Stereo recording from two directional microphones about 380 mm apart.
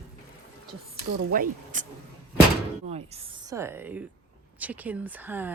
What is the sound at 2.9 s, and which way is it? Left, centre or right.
Speech, centre.